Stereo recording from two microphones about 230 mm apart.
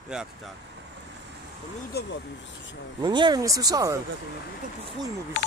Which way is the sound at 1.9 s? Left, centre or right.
Left.